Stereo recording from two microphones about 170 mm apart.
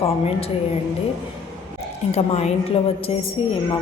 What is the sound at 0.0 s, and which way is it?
Speech, 35° left (ahead or behind).